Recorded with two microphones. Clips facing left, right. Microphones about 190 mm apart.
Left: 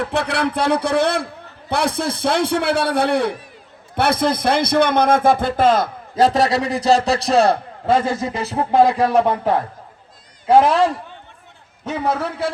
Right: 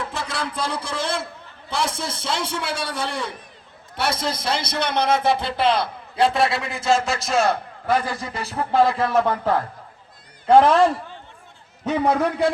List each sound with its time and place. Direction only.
0.0 s a man's voice: 65° left (ahead or behind); by 9.6 s 20° left (ahead or behind)
10.4 s a man's voice: 10° left (ahead or behind)
12.0 s a man's voice: 15° right (ahead or behind)